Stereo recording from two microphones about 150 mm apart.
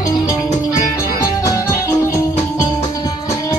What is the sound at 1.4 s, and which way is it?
Music, 20° left (ahead or behind).